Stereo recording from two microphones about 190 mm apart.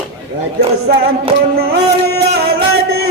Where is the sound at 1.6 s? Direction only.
60° right (ahead or behind).